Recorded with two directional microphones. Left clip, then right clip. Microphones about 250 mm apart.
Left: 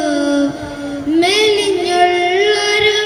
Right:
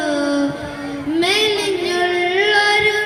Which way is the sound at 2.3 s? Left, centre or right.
Centre.